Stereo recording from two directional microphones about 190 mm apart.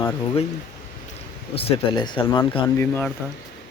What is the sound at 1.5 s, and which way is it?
Speech, 30° left (ahead or behind).